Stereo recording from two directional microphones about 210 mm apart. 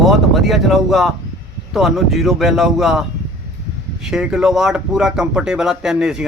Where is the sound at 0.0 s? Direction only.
Centre (ahead or behind).